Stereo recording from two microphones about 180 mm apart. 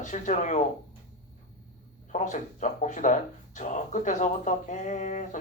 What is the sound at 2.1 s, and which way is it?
Speech, 45° left (ahead or behind).